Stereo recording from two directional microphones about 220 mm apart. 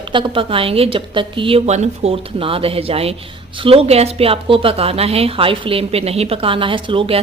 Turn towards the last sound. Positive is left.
turn(degrees=-25)  # may be behind; listen again after turning